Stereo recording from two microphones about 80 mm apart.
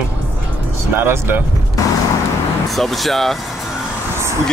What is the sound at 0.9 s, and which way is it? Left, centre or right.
Speech, right.